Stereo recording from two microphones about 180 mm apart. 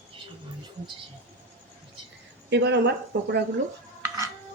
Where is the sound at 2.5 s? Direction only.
70° right (ahead or behind).